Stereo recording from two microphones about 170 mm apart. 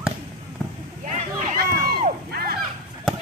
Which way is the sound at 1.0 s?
50° right (ahead or behind).